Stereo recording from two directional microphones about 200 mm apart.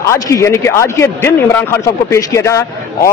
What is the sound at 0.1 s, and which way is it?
A man's voice, 15° left (ahead or behind).